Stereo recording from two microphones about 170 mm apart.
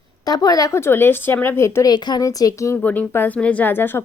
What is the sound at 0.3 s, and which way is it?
Speech, 20° left (ahead or behind).